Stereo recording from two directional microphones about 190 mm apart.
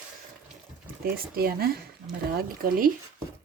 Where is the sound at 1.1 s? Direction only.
50° right (ahead or behind).